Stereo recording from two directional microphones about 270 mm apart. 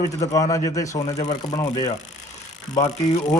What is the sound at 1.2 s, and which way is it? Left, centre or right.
Speech, left.